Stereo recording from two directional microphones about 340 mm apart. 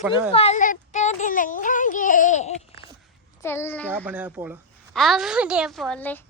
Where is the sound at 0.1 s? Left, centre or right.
Centre.